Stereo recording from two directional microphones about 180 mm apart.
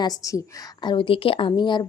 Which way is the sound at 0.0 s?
20° left (ahead or behind).